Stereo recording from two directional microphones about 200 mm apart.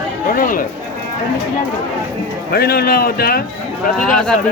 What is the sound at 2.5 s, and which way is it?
Speech, 50° left (ahead or behind).